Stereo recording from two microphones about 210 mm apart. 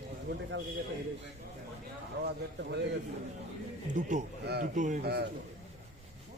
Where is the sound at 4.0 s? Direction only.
35° right (ahead or behind).